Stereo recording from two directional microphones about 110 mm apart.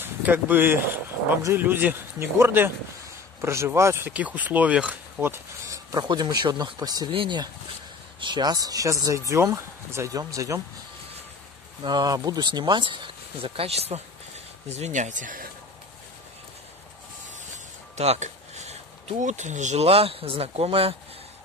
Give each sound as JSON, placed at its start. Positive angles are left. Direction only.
{"t": 0.0, "sound": "speech", "side_deg": -15}
{"t": 5.9, "sound": "speech", "side_deg": -40}
{"t": 11.8, "sound": "speech", "side_deg": -40}
{"t": 14.8, "sound": "speech", "side_deg": -90}
{"t": 17.9, "sound": "speech", "side_deg": -80}